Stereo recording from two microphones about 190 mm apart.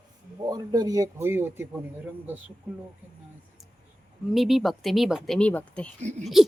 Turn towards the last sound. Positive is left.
turn(degrees=-40)  # may be behind; listen again after turning